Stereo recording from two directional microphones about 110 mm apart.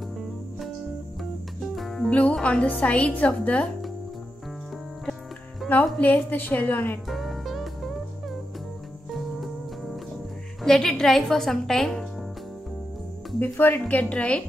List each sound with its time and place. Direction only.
1.8 s music: centre (ahead or behind)
2.0 s a woman's voice: 10° left (ahead or behind)
5.7 s a woman's voice: 15° left (ahead or behind)
7.1 s music: centre (ahead or behind)
10.6 s a woman's voice: 5° left (ahead or behind)
13.4 s a woman's voice: 15° left (ahead or behind)